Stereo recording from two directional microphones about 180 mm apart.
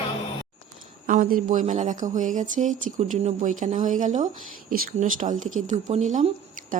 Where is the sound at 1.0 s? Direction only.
50° right (ahead or behind).